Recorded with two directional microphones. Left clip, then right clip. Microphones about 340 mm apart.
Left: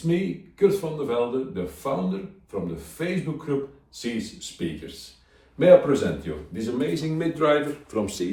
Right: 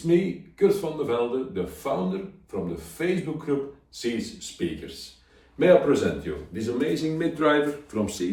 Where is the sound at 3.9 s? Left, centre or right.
Centre.